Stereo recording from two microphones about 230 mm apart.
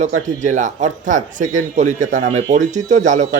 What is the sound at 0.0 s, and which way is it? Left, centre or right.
Speech, right.